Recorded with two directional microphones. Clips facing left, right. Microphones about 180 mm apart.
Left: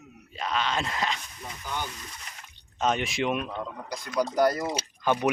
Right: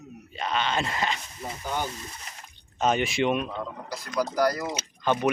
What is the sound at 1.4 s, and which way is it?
Frying, 30° right (ahead or behind).